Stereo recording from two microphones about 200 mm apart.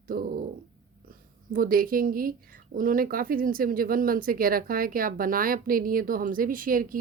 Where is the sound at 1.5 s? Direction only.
45° right (ahead or behind).